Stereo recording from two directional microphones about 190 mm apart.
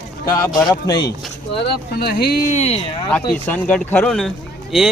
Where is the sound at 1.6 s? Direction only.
55° left (ahead or behind).